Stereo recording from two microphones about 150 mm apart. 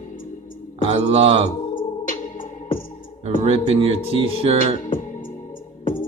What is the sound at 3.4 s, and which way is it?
Mantra, 45° right (ahead or behind).